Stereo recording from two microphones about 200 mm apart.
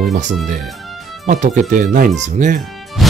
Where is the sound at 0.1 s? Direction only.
35° right (ahead or behind).